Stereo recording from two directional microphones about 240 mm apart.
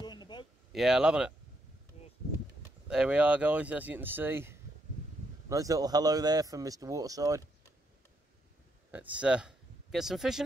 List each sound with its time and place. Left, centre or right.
0.0 s a sound: centre
0.7 s speech: centre
2.9 s speech: centre
8.9 s speech: centre